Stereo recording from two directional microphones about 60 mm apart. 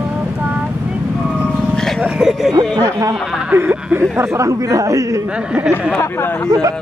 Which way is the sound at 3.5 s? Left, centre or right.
Right.